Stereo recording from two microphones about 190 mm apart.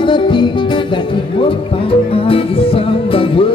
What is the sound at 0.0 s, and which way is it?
Music, 25° left (ahead or behind).